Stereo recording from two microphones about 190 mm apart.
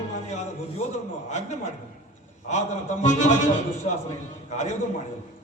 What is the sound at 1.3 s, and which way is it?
A man's voice, 40° left (ahead or behind).